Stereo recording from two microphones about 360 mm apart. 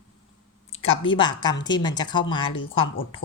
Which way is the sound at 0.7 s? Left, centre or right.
Left.